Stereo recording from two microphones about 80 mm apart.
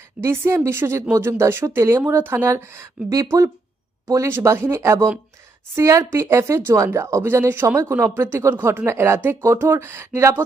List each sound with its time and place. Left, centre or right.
0.2 s speech: right